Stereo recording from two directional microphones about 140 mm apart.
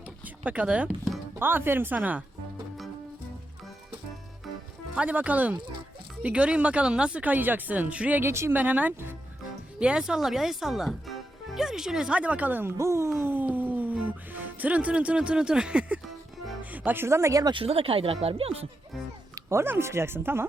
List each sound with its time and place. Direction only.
0.4 s speech: 10° right (ahead or behind)
4.9 s speech: 10° right (ahead or behind)
17.5 s speech: 40° right (ahead or behind)
19.5 s speech: 15° right (ahead or behind)